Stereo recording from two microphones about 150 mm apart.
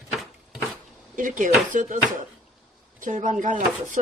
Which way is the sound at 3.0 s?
55° right (ahead or behind).